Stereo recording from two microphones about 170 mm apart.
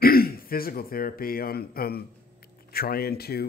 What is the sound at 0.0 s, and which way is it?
Speech, 60° left (ahead or behind).